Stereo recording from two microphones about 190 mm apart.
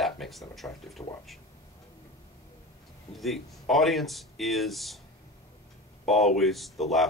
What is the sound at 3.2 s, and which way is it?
Speech, centre (ahead or behind).